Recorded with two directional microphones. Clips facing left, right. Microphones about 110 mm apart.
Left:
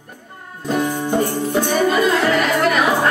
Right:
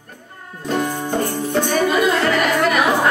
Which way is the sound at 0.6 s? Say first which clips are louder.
Left 1 dB; 15° left (ahead or behind).